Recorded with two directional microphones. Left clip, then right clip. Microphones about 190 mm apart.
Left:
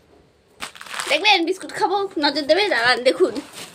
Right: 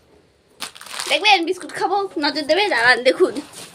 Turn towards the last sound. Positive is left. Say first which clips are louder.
# right 2 dB
turn(degrees=-5)  # may be behind; listen again after turning